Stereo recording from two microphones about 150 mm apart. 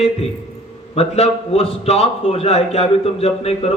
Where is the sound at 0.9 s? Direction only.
40° left (ahead or behind).